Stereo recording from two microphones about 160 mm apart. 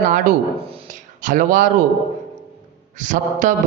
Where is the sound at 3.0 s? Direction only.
55° right (ahead or behind).